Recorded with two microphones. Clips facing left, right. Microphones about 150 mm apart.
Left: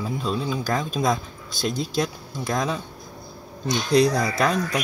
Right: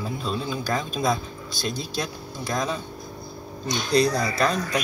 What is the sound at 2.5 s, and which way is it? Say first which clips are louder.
Speech: left 1 dB; 15° left (ahead or behind).